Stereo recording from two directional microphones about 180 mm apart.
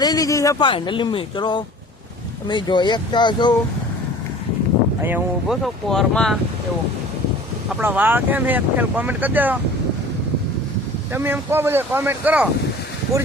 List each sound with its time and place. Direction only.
0.0 s speech: 20° left (ahead or behind)
5.0 s speech: 10° right (ahead or behind)
5.6 s speech: centre (ahead or behind)
7.7 s speech: 10° right (ahead or behind)
11.1 s speech: 10° right (ahead or behind)